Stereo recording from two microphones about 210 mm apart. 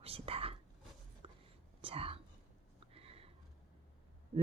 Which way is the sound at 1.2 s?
30° right (ahead or behind).